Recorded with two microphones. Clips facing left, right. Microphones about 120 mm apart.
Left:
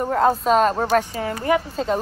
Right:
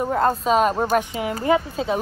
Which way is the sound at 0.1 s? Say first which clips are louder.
Left 3 dB; centre (ahead or behind).